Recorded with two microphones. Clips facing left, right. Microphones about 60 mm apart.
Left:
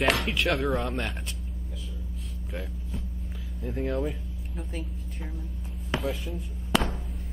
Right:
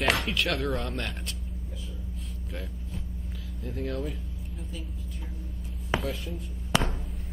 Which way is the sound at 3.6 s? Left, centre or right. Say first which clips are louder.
Left 4 dB; left.